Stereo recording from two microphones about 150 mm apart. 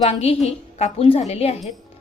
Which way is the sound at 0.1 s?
40° left (ahead or behind).